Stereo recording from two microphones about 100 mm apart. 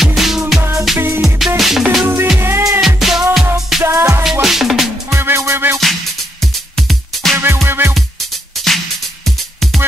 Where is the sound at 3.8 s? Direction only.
30° right (ahead or behind).